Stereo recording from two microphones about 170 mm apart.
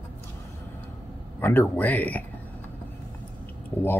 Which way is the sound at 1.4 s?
10° left (ahead or behind).